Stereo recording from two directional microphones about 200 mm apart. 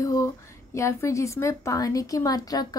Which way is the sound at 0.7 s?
15° left (ahead or behind).